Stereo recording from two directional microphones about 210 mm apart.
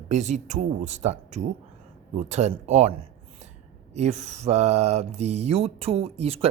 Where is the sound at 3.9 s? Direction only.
30° right (ahead or behind).